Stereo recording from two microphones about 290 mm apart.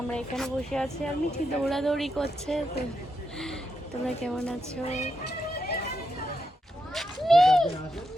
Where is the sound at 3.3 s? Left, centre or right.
Centre.